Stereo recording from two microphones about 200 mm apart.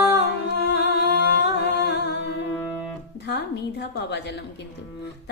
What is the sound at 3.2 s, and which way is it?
A woman's voice, 55° left (ahead or behind).